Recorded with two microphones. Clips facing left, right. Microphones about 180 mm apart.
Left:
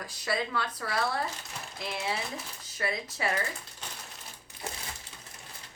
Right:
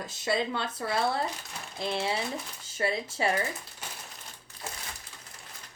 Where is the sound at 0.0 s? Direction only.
25° right (ahead or behind).